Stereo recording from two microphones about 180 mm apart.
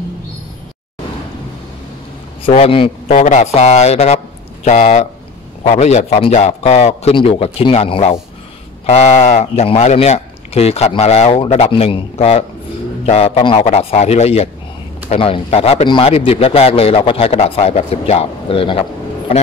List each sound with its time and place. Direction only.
2.4 s a man's voice: 30° left (ahead or behind)
3.2 s a man's voice: 40° left (ahead or behind)